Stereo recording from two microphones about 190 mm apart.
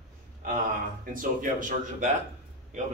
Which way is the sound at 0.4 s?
50° right (ahead or behind).